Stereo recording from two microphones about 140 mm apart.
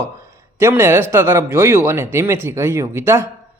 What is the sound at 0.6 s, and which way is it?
Speech, 20° right (ahead or behind).